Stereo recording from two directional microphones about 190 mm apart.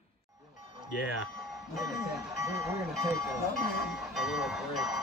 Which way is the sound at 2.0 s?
15° right (ahead or behind).